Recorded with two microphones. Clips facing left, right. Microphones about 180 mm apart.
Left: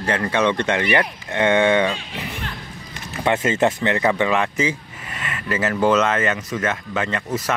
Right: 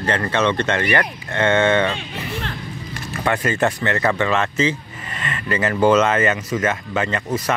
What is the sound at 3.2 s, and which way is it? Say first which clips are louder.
Speech: left 1 dB; 20° left (ahead or behind).